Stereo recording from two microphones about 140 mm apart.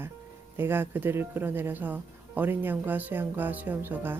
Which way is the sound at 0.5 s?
15° right (ahead or behind).